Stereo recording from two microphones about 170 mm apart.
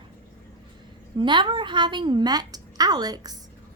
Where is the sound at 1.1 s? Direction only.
25° right (ahead or behind).